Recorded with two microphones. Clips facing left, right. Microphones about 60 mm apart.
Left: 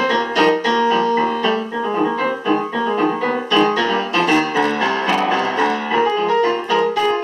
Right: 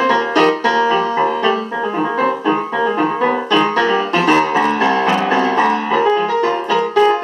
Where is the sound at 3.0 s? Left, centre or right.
Right.